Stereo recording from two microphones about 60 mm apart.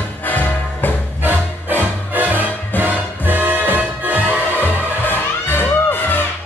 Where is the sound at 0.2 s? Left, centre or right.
Left.